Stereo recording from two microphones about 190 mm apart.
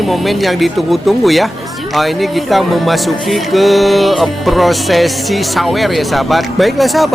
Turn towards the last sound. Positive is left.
turn(degrees=0)  # may be behind; listen again after turning